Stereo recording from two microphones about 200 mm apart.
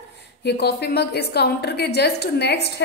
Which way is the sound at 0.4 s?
55° left (ahead or behind).